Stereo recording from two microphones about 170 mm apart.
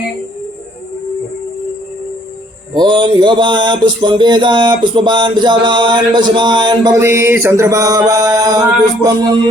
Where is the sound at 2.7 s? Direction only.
25° right (ahead or behind).